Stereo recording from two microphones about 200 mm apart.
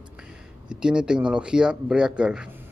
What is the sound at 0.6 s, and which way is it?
Speech, 5° right (ahead or behind).